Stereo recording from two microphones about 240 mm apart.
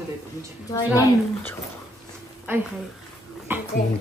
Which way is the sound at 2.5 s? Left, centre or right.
Centre.